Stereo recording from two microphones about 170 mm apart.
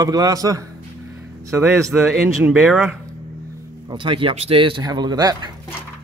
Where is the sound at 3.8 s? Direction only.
30° right (ahead or behind).